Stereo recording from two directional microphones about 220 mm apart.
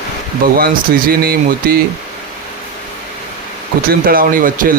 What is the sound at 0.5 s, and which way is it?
Speech, 45° right (ahead or behind).